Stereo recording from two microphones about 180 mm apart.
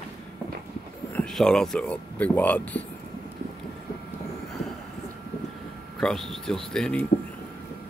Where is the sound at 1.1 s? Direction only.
5° left (ahead or behind).